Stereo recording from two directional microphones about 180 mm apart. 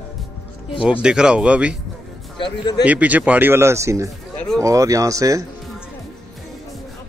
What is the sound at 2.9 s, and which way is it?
Speech, 10° right (ahead or behind).